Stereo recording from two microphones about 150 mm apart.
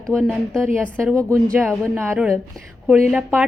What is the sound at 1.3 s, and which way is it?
A woman's voice, 15° right (ahead or behind).